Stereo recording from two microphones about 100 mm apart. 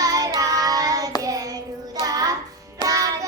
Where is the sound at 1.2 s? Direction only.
35° right (ahead or behind).